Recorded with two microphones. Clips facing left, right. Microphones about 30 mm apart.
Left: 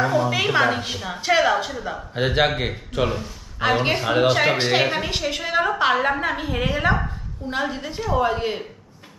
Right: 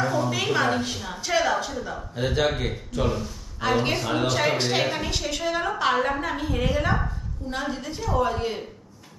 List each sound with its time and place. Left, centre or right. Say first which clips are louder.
0.0 s a woman's voice: left 4 dB; left
2.1 s a man's voice: left 4 dB; left
3.2 s a woman's voice: left 4 dB; left